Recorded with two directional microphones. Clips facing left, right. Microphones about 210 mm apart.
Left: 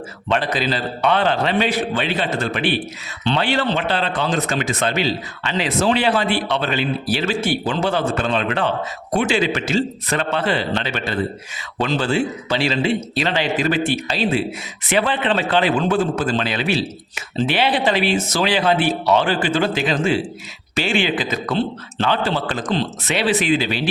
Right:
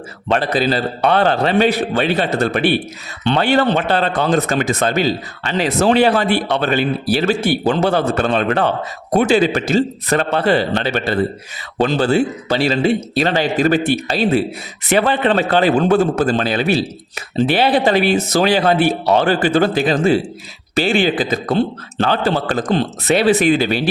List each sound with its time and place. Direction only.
0.3 s a man's voice: 40° right (ahead or behind)
18.2 s speech: 60° right (ahead or behind)
18.4 s a man's voice: 40° right (ahead or behind)
21.3 s speech: 50° right (ahead or behind)
22.6 s speech: 50° right (ahead or behind)
23.0 s speech: 40° right (ahead or behind)